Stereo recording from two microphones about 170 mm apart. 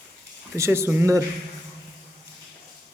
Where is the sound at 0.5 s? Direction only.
15° right (ahead or behind).